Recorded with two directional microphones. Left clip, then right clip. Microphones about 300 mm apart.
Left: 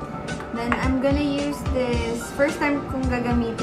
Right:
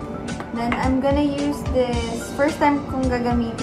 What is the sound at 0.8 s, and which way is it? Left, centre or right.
Speech, centre.